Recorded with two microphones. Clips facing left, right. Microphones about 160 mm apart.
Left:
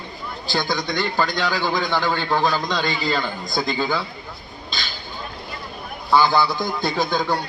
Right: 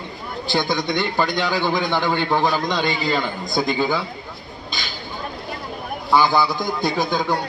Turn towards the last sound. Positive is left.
turn(degrees=-15)  # may be behind; listen again after turning